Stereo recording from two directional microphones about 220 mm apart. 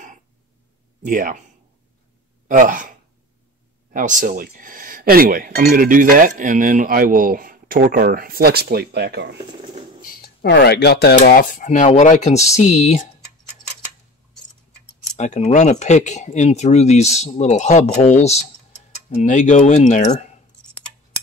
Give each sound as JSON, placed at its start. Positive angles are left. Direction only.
{"t": 1.0, "sound": "speech", "side_deg": -35}
{"t": 2.4, "sound": "speech", "side_deg": -35}
{"t": 3.9, "sound": "speech", "side_deg": -35}
{"t": 10.0, "sound": "speech", "side_deg": 45}
{"t": 15.1, "sound": "speech", "side_deg": 30}